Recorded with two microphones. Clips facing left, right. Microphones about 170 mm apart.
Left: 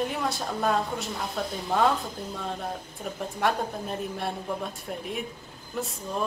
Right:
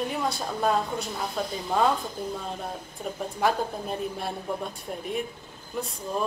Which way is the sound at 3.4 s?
Centre (ahead or behind).